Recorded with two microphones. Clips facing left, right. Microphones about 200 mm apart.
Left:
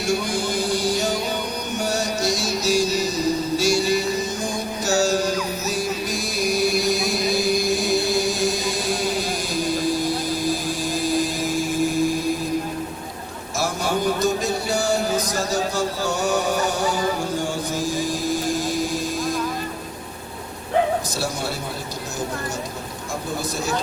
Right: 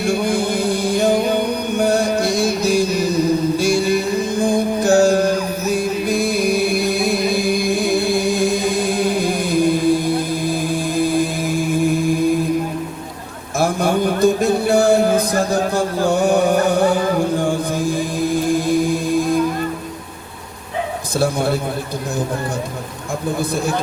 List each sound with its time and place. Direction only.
0.0 s music: 55° right (ahead or behind)
13.6 s music: 55° right (ahead or behind)
21.2 s a sound: 55° right (ahead or behind)